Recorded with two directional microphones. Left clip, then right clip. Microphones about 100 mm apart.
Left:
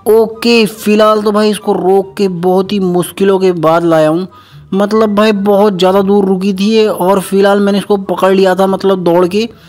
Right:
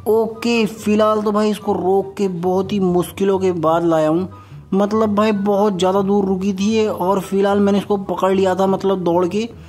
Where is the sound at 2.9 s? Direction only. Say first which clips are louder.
Left 8 dB; 40° left (ahead or behind).